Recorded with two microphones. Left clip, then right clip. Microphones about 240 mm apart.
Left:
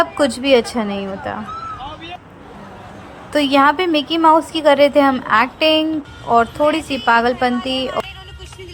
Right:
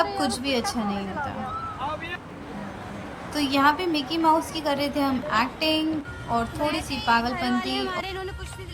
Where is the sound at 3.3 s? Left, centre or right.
Centre.